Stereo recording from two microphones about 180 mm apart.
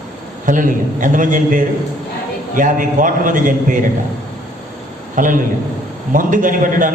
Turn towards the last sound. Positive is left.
turn(degrees=-45)  # may be behind; listen again after turning